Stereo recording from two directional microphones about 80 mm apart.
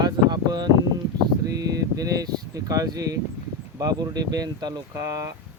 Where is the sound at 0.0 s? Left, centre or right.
Right.